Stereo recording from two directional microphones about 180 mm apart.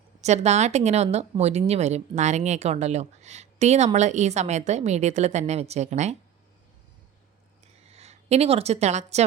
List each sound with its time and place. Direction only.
0.2 s speech: 40° right (ahead or behind)
7.9 s speech: 35° right (ahead or behind)